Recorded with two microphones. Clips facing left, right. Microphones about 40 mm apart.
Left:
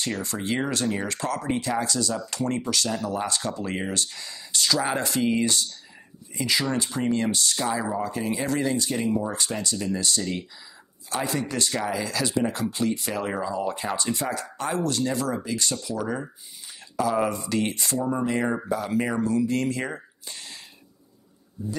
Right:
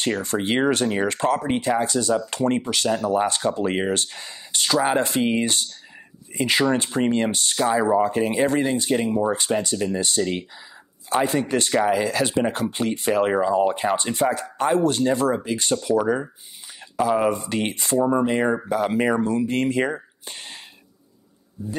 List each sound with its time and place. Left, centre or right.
0.1 s speech: right
7.5 s speech: right
20.2 s whispering: right